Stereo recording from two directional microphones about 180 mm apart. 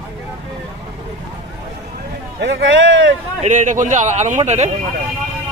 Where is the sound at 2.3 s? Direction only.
80° right.